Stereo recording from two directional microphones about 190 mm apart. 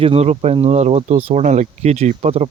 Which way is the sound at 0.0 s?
30° right (ahead or behind).